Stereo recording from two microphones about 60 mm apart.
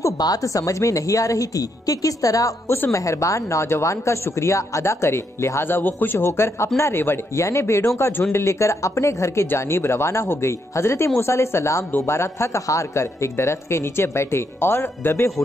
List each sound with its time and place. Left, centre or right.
0.0 s a woman's voice: left
7.3 s speech: left